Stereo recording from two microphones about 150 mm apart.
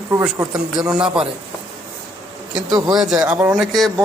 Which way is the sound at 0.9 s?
5° right (ahead or behind).